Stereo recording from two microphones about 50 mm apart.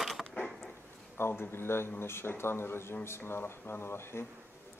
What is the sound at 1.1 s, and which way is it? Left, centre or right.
A man's voice, left.